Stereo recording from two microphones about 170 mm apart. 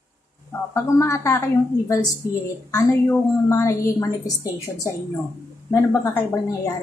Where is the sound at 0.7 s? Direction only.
20° left (ahead or behind).